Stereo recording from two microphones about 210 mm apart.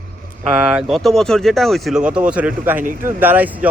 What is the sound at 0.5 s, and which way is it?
Speech, 5° right (ahead or behind).